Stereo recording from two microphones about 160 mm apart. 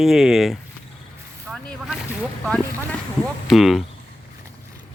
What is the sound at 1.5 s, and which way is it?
Boat, centre (ahead or behind).